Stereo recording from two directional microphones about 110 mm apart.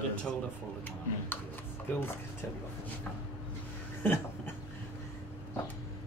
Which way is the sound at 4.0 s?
20° left (ahead or behind).